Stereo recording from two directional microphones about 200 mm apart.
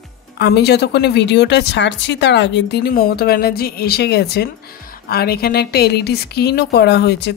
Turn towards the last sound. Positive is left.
turn(degrees=55)  # may be behind; listen again after turning